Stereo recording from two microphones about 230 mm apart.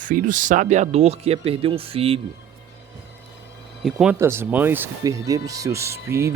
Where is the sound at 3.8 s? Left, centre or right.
Centre.